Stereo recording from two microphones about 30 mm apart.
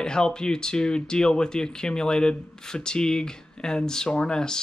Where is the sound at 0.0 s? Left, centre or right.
Left.